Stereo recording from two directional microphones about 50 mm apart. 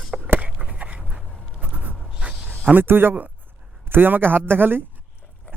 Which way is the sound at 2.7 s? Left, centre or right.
Right.